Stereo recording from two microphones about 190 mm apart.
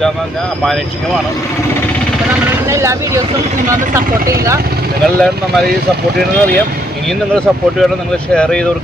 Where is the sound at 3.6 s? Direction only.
45° right (ahead or behind).